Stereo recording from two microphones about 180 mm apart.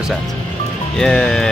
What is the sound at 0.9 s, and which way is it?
Speech, 5° left (ahead or behind).